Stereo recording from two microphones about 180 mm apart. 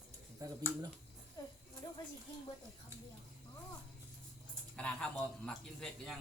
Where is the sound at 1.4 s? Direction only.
20° left (ahead or behind).